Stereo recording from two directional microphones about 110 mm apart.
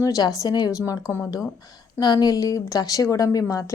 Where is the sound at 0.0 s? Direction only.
35° left (ahead or behind).